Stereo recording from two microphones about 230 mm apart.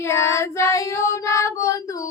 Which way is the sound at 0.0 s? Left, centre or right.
Centre.